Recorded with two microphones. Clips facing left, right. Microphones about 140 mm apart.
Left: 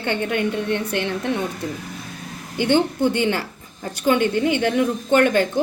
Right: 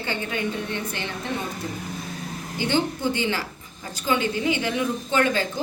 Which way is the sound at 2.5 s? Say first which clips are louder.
Left 6 dB; 60° left (ahead or behind).